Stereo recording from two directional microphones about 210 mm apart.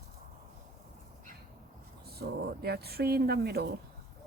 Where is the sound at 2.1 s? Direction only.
50° right (ahead or behind).